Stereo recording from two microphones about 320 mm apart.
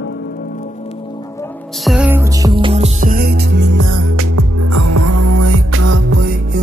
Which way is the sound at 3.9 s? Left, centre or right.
Right.